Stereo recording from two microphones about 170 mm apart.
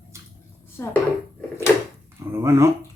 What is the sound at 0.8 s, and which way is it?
Speech, 10° left (ahead or behind).